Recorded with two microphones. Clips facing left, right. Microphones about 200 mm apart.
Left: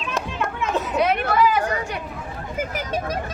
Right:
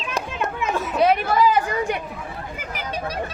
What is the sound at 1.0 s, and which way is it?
Chatter, 30° right (ahead or behind).